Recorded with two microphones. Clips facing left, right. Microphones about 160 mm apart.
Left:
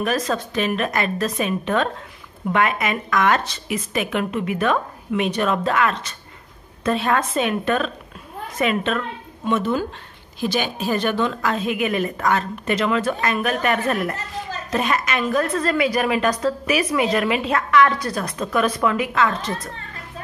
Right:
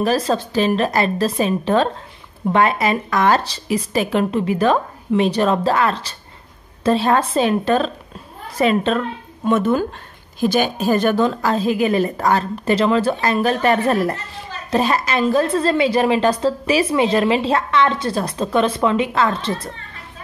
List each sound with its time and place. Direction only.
0.0 s speech: 30° right (ahead or behind)
9.5 s a woman's voice: 45° right (ahead or behind); by 19.7 s 30° right (ahead or behind)